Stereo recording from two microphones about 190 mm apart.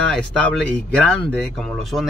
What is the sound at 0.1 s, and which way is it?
Speech, 5° left (ahead or behind).